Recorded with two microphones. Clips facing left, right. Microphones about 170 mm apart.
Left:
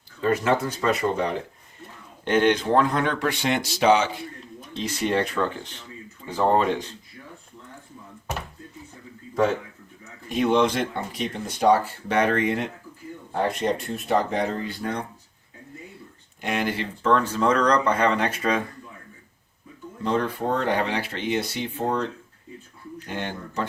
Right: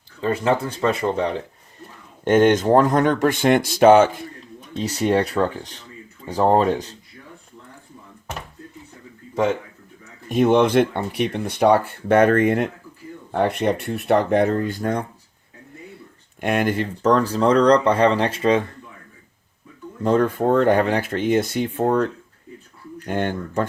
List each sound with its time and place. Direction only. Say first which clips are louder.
0.2 s speech: right 1 dB; 30° right (ahead or behind)
2.2 s speech: right 5 dB; 45° right (ahead or behind)
10.2 s speech: right 4 dB; 50° right (ahead or behind)
13.3 s speech: right 4 dB; 60° right (ahead or behind)
16.4 s speech: right 6 dB; 50° right (ahead or behind); by 18.6 s 25° right (ahead or behind)
20.0 s speech: right 6 dB; 50° right (ahead or behind)